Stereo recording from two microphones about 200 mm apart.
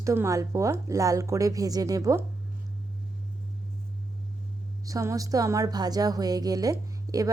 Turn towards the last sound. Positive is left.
turn(degrees=-15)  # may be behind; listen again after turning